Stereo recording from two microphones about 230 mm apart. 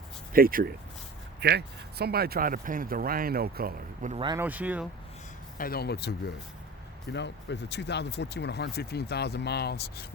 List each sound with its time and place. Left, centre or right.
0.3 s speech: right
4.2 s speech: centre
4.4 s speech: centre
5.5 s speech: left